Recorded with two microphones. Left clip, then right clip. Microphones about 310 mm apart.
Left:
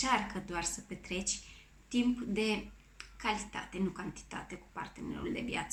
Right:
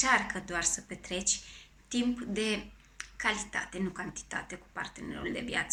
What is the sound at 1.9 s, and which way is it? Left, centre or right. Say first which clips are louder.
Speech: right 1 dB; centre.